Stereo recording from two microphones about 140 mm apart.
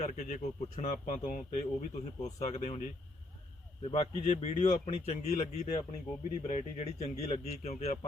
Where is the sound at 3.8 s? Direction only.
45° left (ahead or behind).